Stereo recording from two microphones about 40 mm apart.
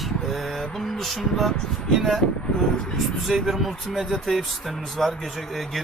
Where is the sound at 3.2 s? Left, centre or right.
Centre.